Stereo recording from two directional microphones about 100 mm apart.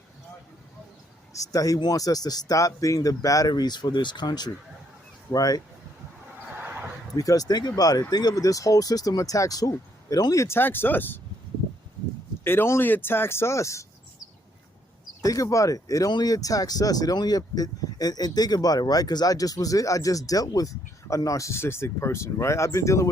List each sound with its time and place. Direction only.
1.3 s speech: 35° left (ahead or behind)
6.6 s a sound: 20° right (ahead or behind)
7.1 s speech: 35° left (ahead or behind); by 11.2 s 20° left (ahead or behind)
12.5 s speech: 25° left (ahead or behind)
15.2 s speech: 35° left (ahead or behind)